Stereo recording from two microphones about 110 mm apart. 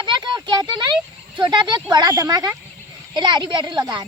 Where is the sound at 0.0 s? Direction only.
45° right (ahead or behind).